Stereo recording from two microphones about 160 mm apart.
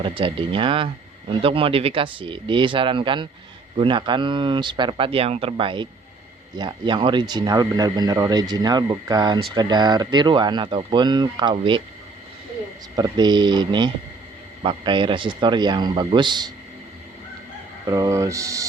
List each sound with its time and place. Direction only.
0.2 s speech: 35° right (ahead or behind)
13.0 s speech: 25° right (ahead or behind)
17.8 s speech: 20° right (ahead or behind)